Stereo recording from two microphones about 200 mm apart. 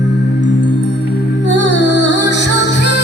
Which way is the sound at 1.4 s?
60° left (ahead or behind).